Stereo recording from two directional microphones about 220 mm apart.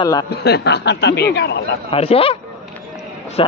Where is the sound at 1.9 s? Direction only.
25° left (ahead or behind).